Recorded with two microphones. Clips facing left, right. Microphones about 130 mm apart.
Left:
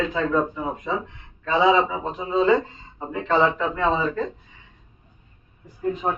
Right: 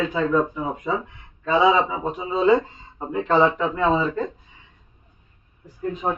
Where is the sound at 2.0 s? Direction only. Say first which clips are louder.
Even; 10° right (ahead or behind).